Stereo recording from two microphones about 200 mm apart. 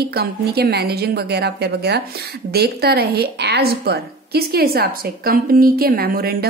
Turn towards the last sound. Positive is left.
turn(degrees=-45)  # may be behind; listen again after turning